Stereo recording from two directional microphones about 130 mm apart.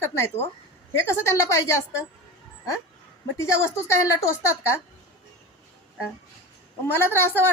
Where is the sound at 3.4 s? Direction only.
20° left (ahead or behind).